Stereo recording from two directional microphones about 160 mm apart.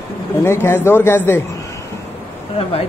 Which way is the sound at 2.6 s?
35° left (ahead or behind).